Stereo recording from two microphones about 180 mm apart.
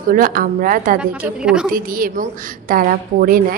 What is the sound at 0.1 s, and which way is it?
Speech, 50° right (ahead or behind).